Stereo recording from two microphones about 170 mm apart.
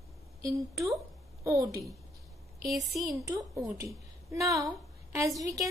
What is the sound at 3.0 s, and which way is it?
A woman's voice, 20° right (ahead or behind).